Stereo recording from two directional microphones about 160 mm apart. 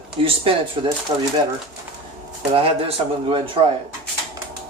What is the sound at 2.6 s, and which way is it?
Speech, 35° right (ahead or behind).